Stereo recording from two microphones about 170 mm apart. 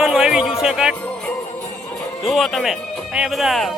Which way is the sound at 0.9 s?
10° left (ahead or behind).